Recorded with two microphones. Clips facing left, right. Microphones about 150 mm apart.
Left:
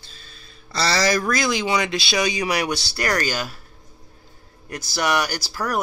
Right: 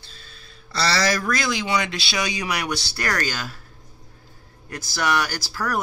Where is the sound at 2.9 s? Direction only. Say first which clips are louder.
Left 5 dB; 15° left (ahead or behind).